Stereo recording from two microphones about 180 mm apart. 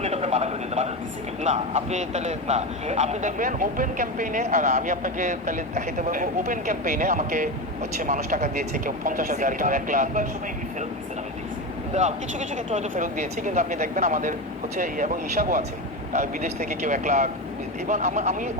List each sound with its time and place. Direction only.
0.0 s a sound: 35° right (ahead or behind)
1.4 s a man's voice: 40° right (ahead or behind)
11.9 s a man's voice: 40° right (ahead or behind)